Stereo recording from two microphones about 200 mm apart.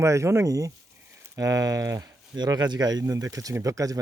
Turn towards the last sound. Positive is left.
turn(degrees=-15)  # may be behind; listen again after turning